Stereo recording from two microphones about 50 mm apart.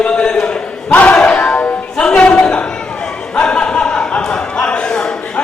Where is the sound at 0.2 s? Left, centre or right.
Centre.